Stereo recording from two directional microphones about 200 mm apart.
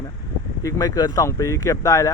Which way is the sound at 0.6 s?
20° left (ahead or behind).